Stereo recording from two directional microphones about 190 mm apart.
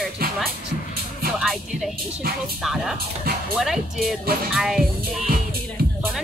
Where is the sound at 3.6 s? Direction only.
Centre (ahead or behind).